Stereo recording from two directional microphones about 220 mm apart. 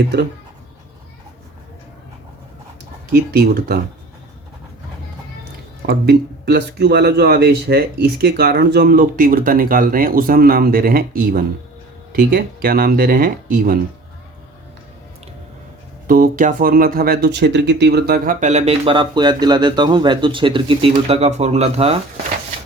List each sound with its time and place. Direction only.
3.1 s speech: 45° right (ahead or behind)
5.8 s speech: 45° right (ahead or behind)
16.0 s speech: 40° right (ahead or behind)